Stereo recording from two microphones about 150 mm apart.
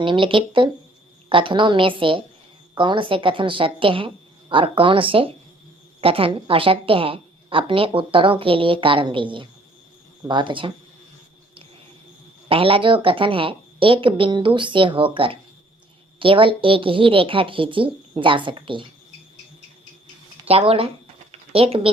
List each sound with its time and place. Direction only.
0.0 s a woman's voice: 35° right (ahead or behind)
12.5 s a woman's voice: 35° right (ahead or behind)
20.5 s a woman's voice: 40° right (ahead or behind)